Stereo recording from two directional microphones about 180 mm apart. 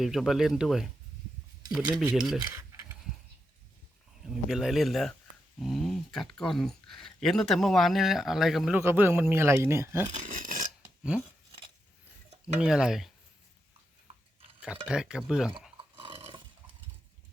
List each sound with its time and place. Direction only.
0.0 s speech: centre (ahead or behind)
1.9 s speech: 5° right (ahead or behind)
2.4 s mechanisms: 15° right (ahead or behind)
4.4 s speech: centre (ahead or behind)
8.8 s speech: 15° right (ahead or behind)
10.1 s a sound: 45° right (ahead or behind)
12.5 s speech: 5° right (ahead or behind)
14.8 s speech: 5° right (ahead or behind)
15.8 s a sound: 30° right (ahead or behind)